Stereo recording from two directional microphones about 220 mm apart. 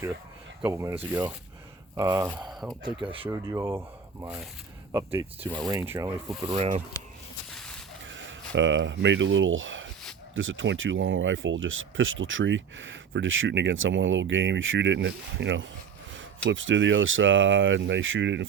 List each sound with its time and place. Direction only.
0.6 s speech: 15° right (ahead or behind)
2.6 s speech: 20° right (ahead or behind)
3.2 s speech: 10° right (ahead or behind)
6.5 s speech: 25° right (ahead or behind)
7.5 s mechanisms: 5° left (ahead or behind)
8.0 s speech: 60° right (ahead or behind)